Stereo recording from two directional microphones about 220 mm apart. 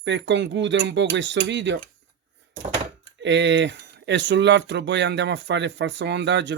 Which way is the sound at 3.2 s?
55° right (ahead or behind).